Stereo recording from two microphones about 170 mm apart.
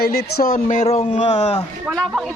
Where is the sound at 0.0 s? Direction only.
65° left (ahead or behind).